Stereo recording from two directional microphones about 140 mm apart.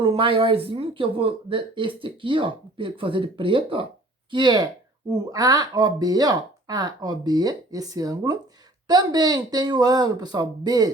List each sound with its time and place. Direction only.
0.0 s speech: 40° right (ahead or behind)